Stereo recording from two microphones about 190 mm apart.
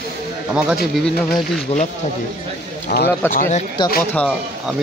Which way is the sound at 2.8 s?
55° left (ahead or behind).